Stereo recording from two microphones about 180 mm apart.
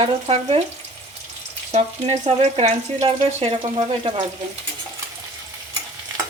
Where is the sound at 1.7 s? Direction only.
35° right (ahead or behind).